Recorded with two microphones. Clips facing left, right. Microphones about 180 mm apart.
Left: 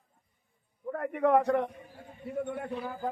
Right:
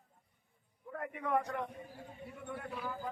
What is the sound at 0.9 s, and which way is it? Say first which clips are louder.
Speech: left 10 dB; 55° left (ahead or behind).